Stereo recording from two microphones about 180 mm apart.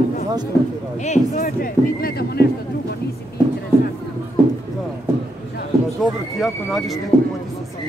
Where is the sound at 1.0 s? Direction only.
40° left (ahead or behind); by 2.4 s 60° left (ahead or behind).